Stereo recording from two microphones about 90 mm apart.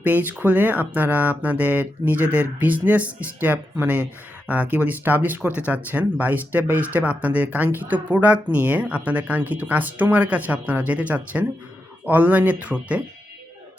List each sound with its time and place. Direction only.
0.0 s speech: 20° right (ahead or behind)